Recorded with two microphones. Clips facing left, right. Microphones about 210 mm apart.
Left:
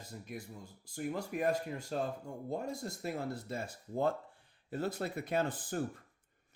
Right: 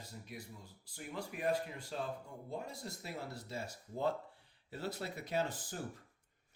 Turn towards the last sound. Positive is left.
turn(degrees=55)  # may be behind; listen again after turning